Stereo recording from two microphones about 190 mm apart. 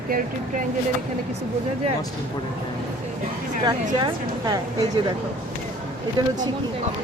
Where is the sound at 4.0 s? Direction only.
20° right (ahead or behind).